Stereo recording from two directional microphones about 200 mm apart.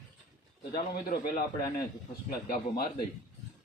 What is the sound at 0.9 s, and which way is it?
A man's voice, 45° left (ahead or behind).